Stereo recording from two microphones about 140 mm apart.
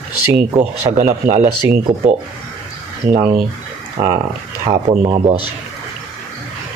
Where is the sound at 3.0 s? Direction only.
80° right.